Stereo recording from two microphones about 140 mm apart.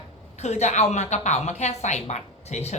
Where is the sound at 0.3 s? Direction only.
50° left (ahead or behind).